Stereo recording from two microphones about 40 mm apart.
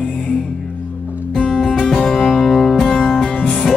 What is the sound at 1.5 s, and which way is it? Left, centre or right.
Music, centre.